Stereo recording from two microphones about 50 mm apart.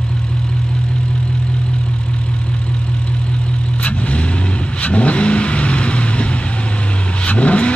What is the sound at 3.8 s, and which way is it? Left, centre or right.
Vehicle, left.